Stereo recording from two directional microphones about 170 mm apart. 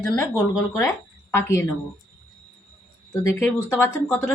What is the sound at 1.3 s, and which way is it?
Speech, 15° left (ahead or behind).